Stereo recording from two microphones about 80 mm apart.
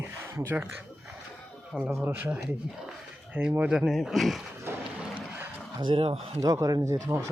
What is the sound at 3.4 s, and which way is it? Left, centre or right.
Speech, right.